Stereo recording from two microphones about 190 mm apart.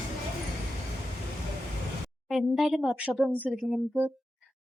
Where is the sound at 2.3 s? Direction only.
Centre (ahead or behind).